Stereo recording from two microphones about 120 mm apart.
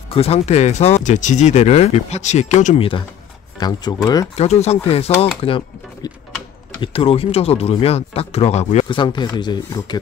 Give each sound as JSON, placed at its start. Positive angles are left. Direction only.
{"t": 0.1, "sound": "speech", "side_deg": 60}
{"t": 3.5, "sound": "speech", "side_deg": 35}
{"t": 4.4, "sound": "speech", "side_deg": 65}
{"t": 6.8, "sound": "speech", "side_deg": 50}
{"t": 8.8, "sound": "speech", "side_deg": 40}